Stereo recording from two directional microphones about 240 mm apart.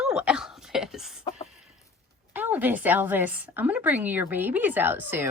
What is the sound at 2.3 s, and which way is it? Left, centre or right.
Speech, centre.